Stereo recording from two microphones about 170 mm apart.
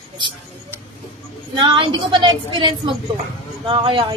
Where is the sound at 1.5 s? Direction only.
30° right (ahead or behind).